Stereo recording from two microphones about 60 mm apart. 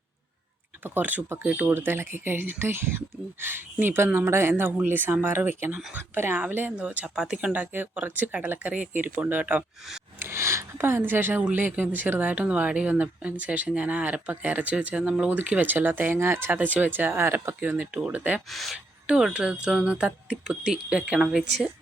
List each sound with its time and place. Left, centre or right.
0.9 s speech: right
1.4 s speech: centre
1.6 s speech: right
6.7 s speech: right
7.2 s speech: centre
7.5 s speech: right
10.2 s speech: right
16.1 s speech: right
16.5 s speech: right
18.5 s speech: centre
19.0 s speech: centre